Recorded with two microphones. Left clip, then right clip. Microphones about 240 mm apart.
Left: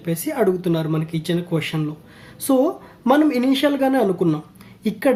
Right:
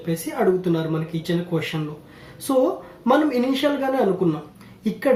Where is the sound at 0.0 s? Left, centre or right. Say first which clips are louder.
Left 2 dB; left.